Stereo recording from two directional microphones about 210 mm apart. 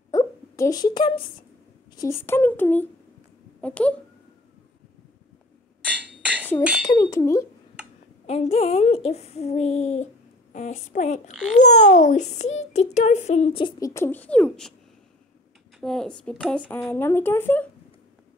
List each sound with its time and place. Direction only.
0.1 s wail: 15° left (ahead or behind)
2.0 s speech: 10° left (ahead or behind)
5.9 s a sound: 5° right (ahead or behind)
6.6 s speech: 5° right (ahead or behind)
7.0 s speech: 15° left (ahead or behind)
8.3 s a child's voice: 30° left (ahead or behind); by 14.7 s 5° left (ahead or behind)
15.8 s speech: 5° left (ahead or behind)